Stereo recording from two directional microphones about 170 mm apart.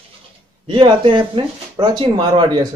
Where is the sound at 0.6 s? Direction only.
30° right (ahead or behind).